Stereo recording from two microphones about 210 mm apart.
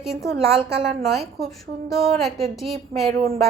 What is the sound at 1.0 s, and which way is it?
A woman's voice, centre (ahead or behind).